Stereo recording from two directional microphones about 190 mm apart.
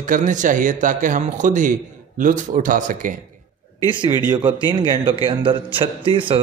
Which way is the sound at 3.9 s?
25° right (ahead or behind).